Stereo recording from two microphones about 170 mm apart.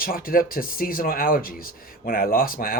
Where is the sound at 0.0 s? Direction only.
60° left (ahead or behind).